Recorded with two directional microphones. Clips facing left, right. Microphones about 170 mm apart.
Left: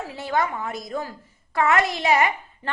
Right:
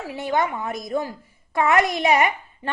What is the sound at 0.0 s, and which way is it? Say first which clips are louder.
A woman's voice: right 2 dB; 15° right (ahead or behind).